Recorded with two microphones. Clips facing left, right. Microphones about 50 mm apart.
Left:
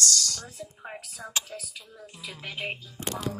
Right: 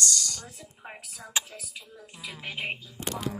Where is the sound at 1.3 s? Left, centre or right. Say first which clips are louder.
Right 2 dB; centre.